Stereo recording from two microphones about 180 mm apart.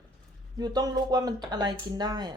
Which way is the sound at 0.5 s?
20° right (ahead or behind).